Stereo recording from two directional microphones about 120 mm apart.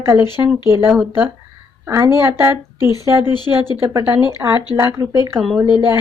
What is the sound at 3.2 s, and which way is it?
Speech, 40° left (ahead or behind).